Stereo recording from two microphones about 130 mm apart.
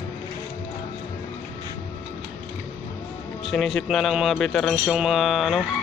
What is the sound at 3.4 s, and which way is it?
Speech, centre (ahead or behind).